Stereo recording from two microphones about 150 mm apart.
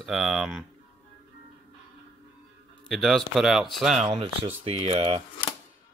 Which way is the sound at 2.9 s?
Centre (ahead or behind).